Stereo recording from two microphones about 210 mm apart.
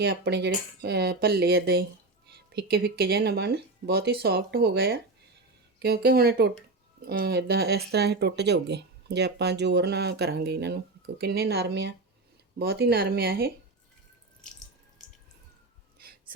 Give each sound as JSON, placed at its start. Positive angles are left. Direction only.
{"t": 0.0, "sound": "speech", "side_deg": -50}